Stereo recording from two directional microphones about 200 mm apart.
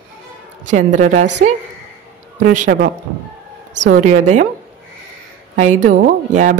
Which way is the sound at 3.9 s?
40° right (ahead or behind).